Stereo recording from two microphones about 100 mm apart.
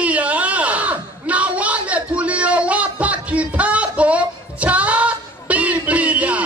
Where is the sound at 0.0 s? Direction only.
15° right (ahead or behind).